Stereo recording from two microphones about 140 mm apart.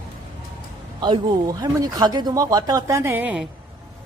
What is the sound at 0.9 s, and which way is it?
Speech, 35° right (ahead or behind).